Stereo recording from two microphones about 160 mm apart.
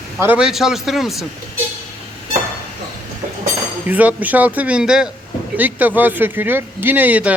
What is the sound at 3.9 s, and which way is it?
Speech, 10° right (ahead or behind).